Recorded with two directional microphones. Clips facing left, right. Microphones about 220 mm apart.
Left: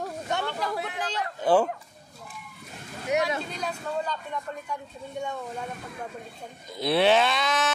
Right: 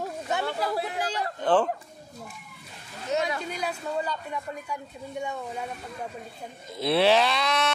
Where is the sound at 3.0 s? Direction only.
15° left (ahead or behind).